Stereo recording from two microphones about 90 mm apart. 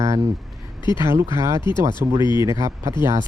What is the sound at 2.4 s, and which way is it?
Speech, 35° right (ahead or behind).